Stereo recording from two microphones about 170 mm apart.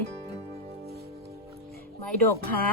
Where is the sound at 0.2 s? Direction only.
40° right (ahead or behind).